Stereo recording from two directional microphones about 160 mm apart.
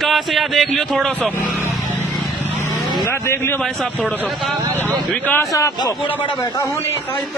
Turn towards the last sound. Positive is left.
turn(degrees=20)  # may be behind; listen again after turning